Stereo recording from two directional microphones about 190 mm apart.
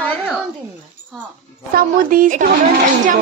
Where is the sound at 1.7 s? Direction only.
45° right (ahead or behind).